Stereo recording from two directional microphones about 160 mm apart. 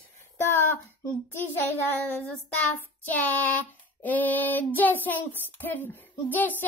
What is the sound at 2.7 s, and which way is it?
Child singing, 10° left (ahead or behind).